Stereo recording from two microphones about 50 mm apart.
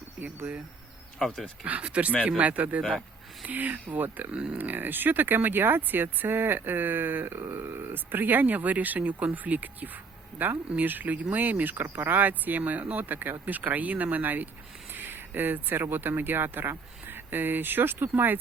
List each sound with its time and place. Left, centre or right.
0.2 s speech: right
1.6 s speech: right
4.3 s speech: right
4.5 s speech: right
7.3 s speech: right
7.9 s speech: right
14.9 s a sound: right
15.4 s speech: right